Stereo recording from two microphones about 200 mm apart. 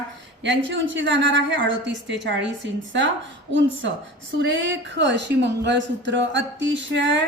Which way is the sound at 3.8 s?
65° right (ahead or behind).